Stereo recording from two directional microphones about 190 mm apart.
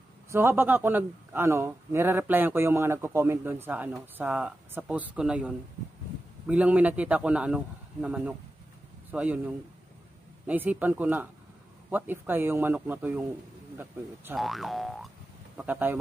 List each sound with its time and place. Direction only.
0.3 s a man's voice: 15° right (ahead or behind)
10.4 s a man's voice: 10° right (ahead or behind)
14.3 s a man's voice: centre (ahead or behind)